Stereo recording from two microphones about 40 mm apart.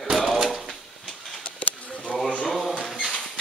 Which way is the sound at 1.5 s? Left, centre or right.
Left.